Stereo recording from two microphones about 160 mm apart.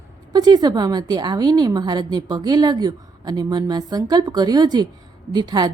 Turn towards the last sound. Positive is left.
turn(degrees=-25)  # may be behind; listen again after turning